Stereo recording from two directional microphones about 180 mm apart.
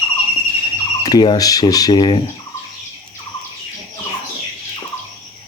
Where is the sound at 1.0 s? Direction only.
20° left (ahead or behind).